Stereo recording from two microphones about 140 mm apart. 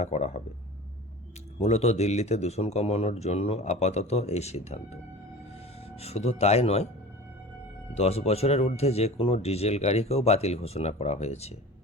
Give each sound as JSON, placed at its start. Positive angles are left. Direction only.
{"t": 0.0, "sound": "speech", "side_deg": 55}
{"t": 1.5, "sound": "speech", "side_deg": 50}
{"t": 6.0, "sound": "speech", "side_deg": 50}
{"t": 7.9, "sound": "speech", "side_deg": 45}